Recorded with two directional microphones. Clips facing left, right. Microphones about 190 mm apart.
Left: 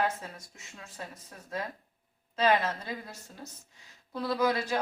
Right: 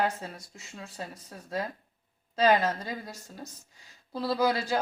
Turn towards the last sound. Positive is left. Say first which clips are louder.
# right 1 dB
turn(degrees=-30)  # may be behind; listen again after turning